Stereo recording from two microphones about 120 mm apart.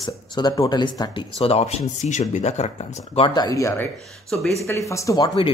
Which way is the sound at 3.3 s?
30° left (ahead or behind).